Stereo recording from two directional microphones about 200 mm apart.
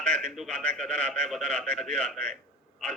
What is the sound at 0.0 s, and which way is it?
A man's voice, 5° left (ahead or behind).